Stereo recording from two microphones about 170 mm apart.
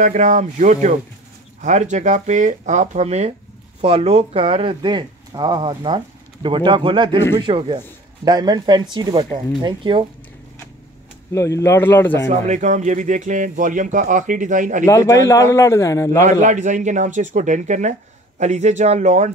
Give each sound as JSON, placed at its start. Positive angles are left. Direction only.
{"t": 0.0, "sound": "speech", "side_deg": -45}
{"t": 11.3, "sound": "a man's voice", "side_deg": 15}
{"t": 12.3, "sound": "speech", "side_deg": -45}
{"t": 14.9, "sound": "a man's voice", "side_deg": 20}
{"t": 16.3, "sound": "speech", "side_deg": -45}